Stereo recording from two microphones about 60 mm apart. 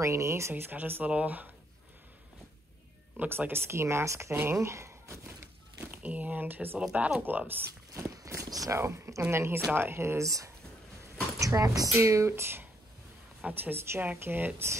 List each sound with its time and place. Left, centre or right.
0.0 s speech: right
1.0 s speech: right
3.3 s speech: right
5.9 s speech: right
7.9 s walk: right
8.7 s speech: right
11.9 s speech: right